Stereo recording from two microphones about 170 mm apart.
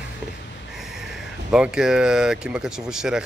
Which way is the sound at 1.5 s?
5° right (ahead or behind).